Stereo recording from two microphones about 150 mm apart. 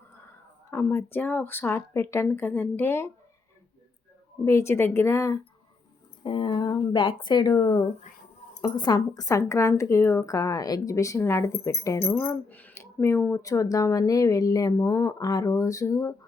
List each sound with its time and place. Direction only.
0.7 s speech: 15° left (ahead or behind)
4.4 s speech: 20° left (ahead or behind)
6.2 s speech: 35° left (ahead or behind)